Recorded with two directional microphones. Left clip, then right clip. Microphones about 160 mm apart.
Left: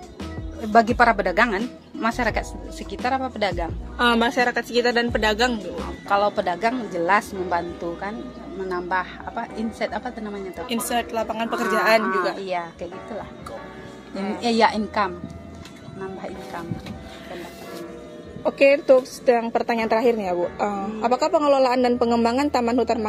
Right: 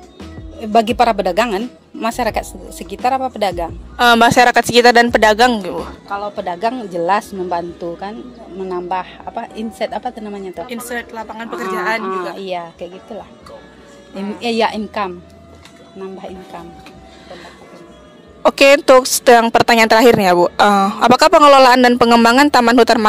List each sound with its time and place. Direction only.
0.7 s a woman's voice: 85° right; by 5.6 s 65° right (ahead or behind)
6.6 s a woman's voice: 65° right (ahead or behind)
10.7 s a woman's voice: 10° left (ahead or behind)
12.0 s a woman's voice: 60° right (ahead or behind)
14.1 s a woman's voice: 5° left (ahead or behind)
14.4 s a woman's voice: 60° right (ahead or behind)
18.5 s a woman's voice: 90° right